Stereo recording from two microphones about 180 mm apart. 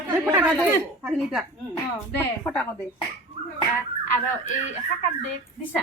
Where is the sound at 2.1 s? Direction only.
10° left (ahead or behind).